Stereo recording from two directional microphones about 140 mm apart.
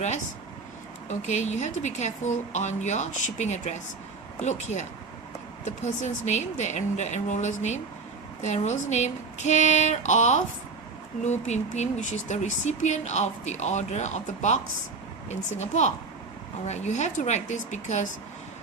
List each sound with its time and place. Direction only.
1.0 s speech: 55° left (ahead or behind)